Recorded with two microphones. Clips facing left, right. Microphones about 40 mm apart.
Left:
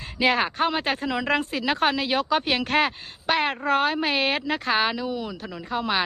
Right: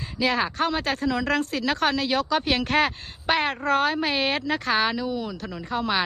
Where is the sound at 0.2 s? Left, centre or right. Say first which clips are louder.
Left 2 dB; left.